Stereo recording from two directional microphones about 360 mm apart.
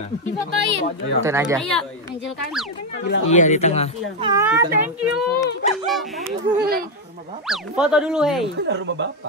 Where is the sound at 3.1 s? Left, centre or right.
Centre.